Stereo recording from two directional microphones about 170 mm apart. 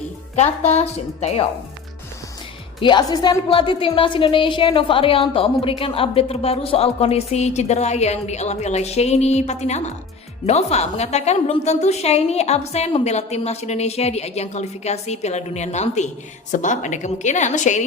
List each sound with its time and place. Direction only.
0.3 s a woman's voice: 40° left (ahead or behind)
2.8 s a woman's voice: 25° left (ahead or behind); by 17.8 s 45° left (ahead or behind)